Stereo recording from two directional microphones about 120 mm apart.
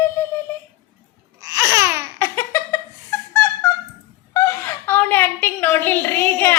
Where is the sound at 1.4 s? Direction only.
25° right (ahead or behind).